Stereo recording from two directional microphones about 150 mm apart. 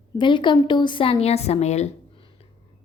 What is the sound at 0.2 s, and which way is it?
A woman's voice, 30° left (ahead or behind).